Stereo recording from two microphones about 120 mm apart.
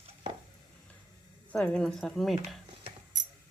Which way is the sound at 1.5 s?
10° left (ahead or behind).